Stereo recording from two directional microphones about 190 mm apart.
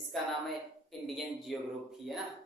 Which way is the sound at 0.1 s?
Centre (ahead or behind).